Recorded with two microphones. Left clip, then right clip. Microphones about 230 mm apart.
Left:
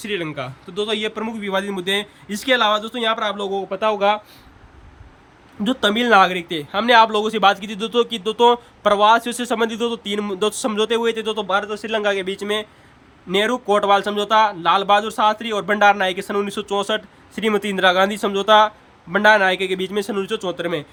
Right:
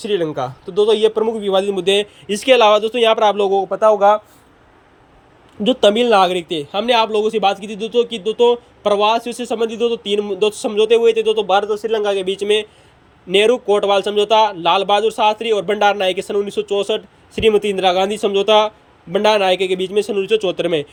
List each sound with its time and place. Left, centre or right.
0.3 s a man's voice: centre
3.7 s speech: centre
5.6 s speech: centre
11.8 s speech: left
12.1 s speech: centre